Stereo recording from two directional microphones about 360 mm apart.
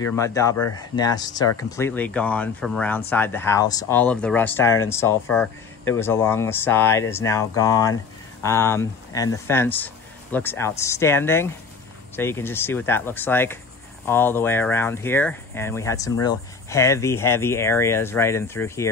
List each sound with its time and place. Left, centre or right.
0.0 s speech: centre